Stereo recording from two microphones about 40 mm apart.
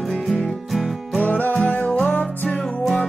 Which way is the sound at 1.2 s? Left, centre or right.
Left.